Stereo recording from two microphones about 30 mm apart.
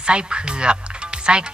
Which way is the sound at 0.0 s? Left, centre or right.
Right.